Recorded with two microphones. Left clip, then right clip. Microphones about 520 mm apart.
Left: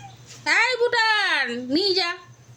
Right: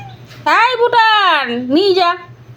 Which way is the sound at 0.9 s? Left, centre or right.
Left.